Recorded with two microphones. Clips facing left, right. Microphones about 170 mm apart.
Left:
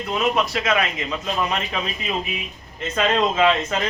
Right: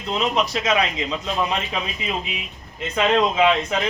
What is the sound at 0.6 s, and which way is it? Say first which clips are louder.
Speech: right 1 dB; 20° right (ahead or behind).